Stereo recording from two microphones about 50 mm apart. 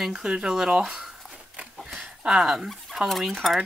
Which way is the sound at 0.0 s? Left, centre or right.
Centre.